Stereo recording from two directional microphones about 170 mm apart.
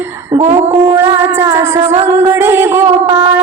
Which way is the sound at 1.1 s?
15° right (ahead or behind).